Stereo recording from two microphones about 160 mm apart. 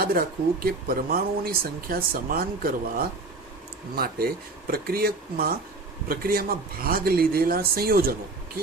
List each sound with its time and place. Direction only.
0.0 s speech: 70° right (ahead or behind)